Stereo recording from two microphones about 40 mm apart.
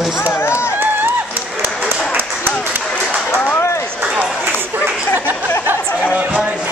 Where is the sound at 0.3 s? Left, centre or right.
Left.